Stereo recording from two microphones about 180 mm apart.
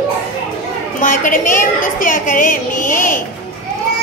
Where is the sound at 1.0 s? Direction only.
45° left (ahead or behind).